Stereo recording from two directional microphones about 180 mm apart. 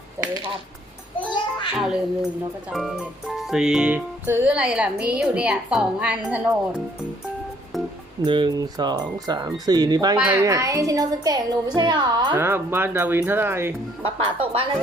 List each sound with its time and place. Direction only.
0.2 s speech: 30° right (ahead or behind)
1.3 s a sound: 25° left (ahead or behind)
1.7 s speech: 5° right (ahead or behind)
2.6 s music: centre (ahead or behind)
8.2 s speech: 25° right (ahead or behind)
12.4 s music: 10° right (ahead or behind)
14.0 s speech: 30° right (ahead or behind)